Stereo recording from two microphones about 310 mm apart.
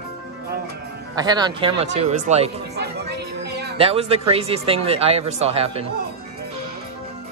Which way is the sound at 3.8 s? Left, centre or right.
Centre.